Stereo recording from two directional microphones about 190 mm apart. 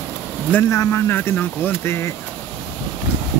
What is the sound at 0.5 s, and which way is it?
Speech, 15° left (ahead or behind).